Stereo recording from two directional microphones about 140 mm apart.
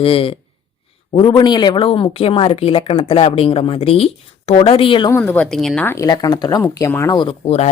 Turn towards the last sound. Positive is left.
turn(degrees=50)  # may be behind; listen again after turning